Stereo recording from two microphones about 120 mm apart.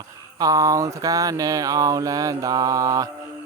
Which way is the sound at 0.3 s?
30° right (ahead or behind).